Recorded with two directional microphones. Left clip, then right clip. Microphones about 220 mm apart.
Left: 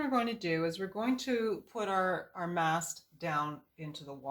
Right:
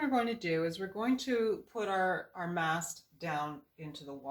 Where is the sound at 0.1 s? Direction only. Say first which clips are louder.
Even; 30° left (ahead or behind).